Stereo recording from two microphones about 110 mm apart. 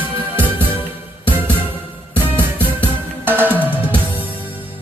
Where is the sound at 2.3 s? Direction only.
20° right (ahead or behind).